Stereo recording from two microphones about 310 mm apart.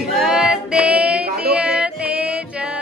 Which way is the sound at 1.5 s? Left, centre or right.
Centre.